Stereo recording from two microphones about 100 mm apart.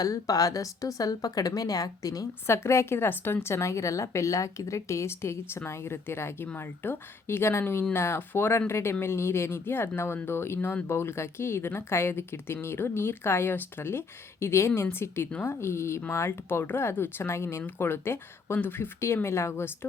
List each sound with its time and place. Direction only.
0.0 s speech: 35° left (ahead or behind)